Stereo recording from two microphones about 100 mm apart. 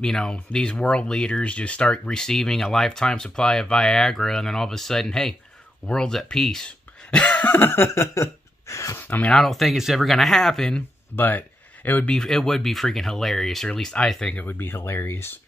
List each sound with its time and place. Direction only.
0.0 s speech: 5° left (ahead or behind); by 9.0 s 30° left (ahead or behind)
9.3 s speech: centre (ahead or behind)
11.1 s speech: 20° left (ahead or behind)
12.2 s speech: 5° left (ahead or behind)
14.4 s speech: 20° left (ahead or behind)